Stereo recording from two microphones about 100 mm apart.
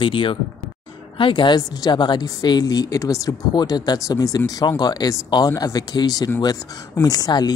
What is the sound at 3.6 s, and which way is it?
Speech, 45° left (ahead or behind).